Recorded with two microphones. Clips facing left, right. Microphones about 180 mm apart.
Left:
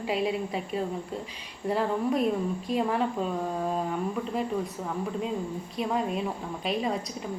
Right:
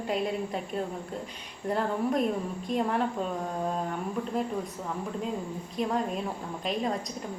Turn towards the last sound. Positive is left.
turn(degrees=5)  # may be behind; listen again after turning